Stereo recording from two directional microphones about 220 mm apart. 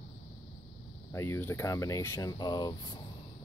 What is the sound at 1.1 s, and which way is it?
Speech, 10° left (ahead or behind).